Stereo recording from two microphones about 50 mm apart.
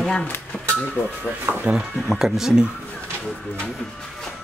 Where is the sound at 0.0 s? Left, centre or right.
Centre.